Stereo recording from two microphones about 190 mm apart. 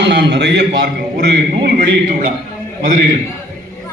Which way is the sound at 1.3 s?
50° right (ahead or behind).